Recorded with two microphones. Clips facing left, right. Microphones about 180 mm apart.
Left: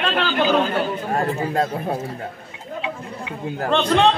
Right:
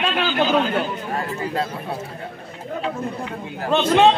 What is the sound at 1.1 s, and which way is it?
Speech, 45° left (ahead or behind).